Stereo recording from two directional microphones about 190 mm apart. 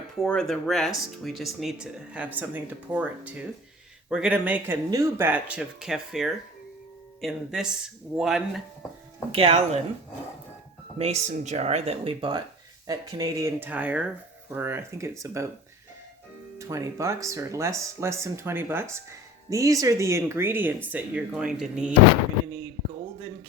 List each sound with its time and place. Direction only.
0.2 s speech: 5° left (ahead or behind)
9.3 s speech: 30° right (ahead or behind)
10.9 s speech: 35° right (ahead or behind); by 15.4 s 15° right (ahead or behind)
16.6 s speech: 15° right (ahead or behind)